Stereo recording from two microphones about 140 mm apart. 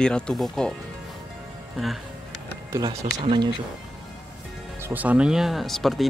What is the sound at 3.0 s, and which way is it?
Speech, 45° right (ahead or behind).